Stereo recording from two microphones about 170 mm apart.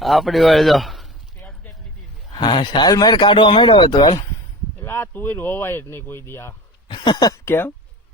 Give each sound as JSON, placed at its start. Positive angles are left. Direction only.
{"t": 0.0, "sound": "a man's voice", "side_deg": 0}
{"t": 2.3, "sound": "speech", "side_deg": 25}
{"t": 4.8, "sound": "speech", "side_deg": 15}
{"t": 6.8, "sound": "speech", "side_deg": 25}